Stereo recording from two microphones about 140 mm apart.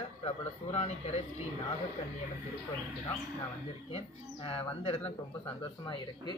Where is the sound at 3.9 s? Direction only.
45° left (ahead or behind).